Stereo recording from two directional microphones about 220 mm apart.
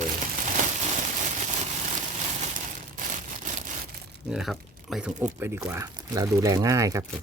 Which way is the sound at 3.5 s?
35° right (ahead or behind).